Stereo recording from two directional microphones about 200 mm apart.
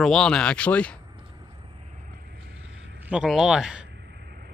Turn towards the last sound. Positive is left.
turn(degrees=-5)  # may be behind; listen again after turning